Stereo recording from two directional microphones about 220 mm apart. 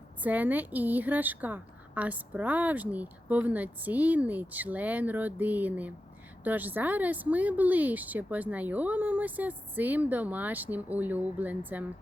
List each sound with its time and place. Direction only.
0.2 s a woman's voice: 5° right (ahead or behind)